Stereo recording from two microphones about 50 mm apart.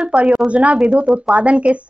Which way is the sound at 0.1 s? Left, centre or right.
Right.